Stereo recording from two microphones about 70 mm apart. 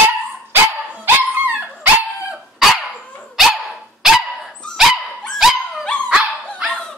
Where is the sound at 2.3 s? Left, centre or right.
Centre.